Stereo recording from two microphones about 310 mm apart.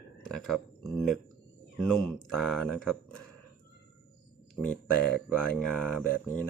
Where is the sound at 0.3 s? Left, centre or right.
Centre.